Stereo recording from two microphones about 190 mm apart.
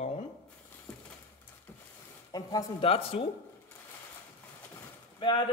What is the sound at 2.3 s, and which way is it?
Speech, 20° left (ahead or behind).